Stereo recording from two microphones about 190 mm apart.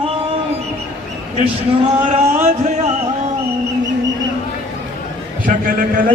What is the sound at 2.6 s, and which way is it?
Speech, 35° right (ahead or behind).